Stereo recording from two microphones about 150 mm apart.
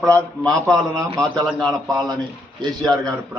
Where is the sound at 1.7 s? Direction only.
25° right (ahead or behind).